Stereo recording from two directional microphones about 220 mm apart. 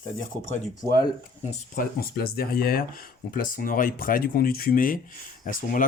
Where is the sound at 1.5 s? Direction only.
40° left (ahead or behind).